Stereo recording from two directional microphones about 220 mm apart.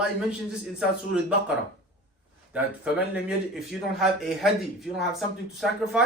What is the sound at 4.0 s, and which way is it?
Speech, centre (ahead or behind).